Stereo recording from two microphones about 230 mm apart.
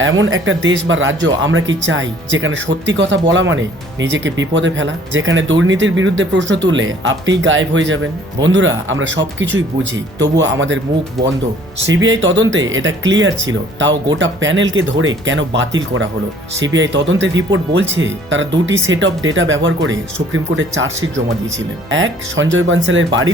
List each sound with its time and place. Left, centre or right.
0.0 s speech: right
11.9 s speech: right